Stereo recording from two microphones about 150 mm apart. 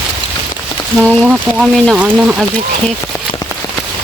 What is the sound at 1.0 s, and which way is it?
Speech, 5° right (ahead or behind).